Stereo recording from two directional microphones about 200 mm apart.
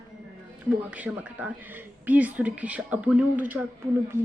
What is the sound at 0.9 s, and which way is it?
A woman's voice, 5° right (ahead or behind).